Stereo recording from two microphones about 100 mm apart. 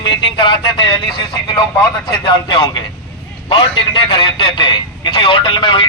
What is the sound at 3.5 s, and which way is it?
A man's voice, 55° left (ahead or behind).